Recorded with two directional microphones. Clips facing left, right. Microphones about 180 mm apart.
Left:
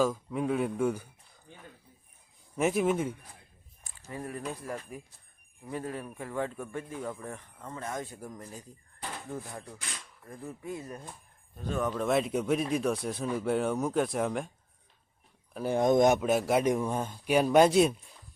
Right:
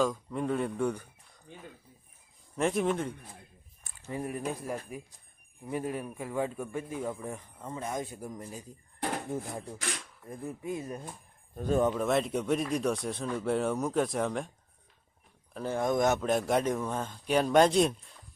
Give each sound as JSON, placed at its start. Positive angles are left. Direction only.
{"t": 0.0, "sound": "speech", "side_deg": 5}
{"t": 2.6, "sound": "speech", "side_deg": 5}
{"t": 4.1, "sound": "speech", "side_deg": -15}
{"t": 9.0, "sound": "drawer open or close", "side_deg": -60}
{"t": 9.3, "sound": "speech", "side_deg": -25}
{"t": 11.5, "sound": "speech", "side_deg": -45}
{"t": 11.9, "sound": "speech", "side_deg": 0}
{"t": 15.5, "sound": "a man's voice", "side_deg": 15}